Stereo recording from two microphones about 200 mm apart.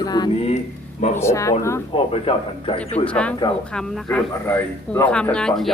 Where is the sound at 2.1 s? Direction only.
30° left (ahead or behind).